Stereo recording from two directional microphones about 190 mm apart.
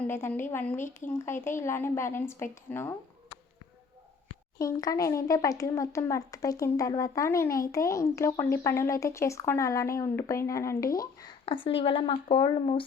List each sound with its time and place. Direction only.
0.1 s speech: 10° left (ahead or behind)
4.5 s speech: 20° left (ahead or behind)